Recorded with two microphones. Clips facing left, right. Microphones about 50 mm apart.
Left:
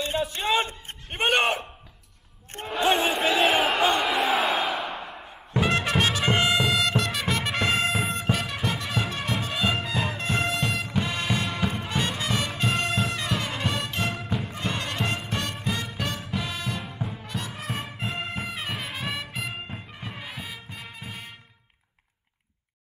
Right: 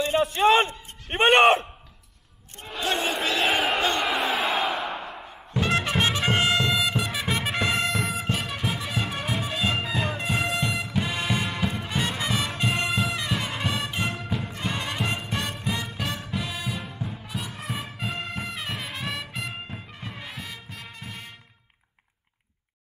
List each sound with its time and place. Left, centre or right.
0.0 s a sound: right
1.0 s speech: right
2.7 s crowd: centre
5.9 s music: centre
6.2 s music: centre
11.7 s music: centre
14.1 s music: centre